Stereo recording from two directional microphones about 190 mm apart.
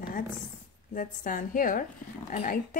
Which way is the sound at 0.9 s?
45° left (ahead or behind).